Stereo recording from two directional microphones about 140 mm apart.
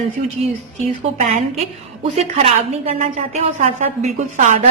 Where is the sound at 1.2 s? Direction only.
55° right (ahead or behind).